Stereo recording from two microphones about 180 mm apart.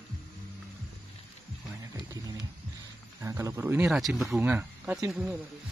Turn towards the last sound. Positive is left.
turn(degrees=0)  # may be behind; listen again after turning